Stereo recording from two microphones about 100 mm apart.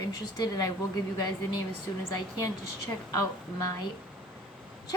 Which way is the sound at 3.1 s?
35° left (ahead or behind).